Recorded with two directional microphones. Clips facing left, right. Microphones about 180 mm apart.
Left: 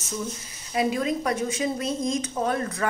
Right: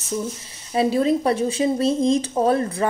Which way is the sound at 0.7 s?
30° right (ahead or behind).